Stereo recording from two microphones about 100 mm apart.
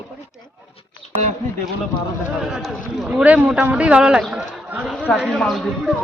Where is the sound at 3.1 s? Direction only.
15° right (ahead or behind).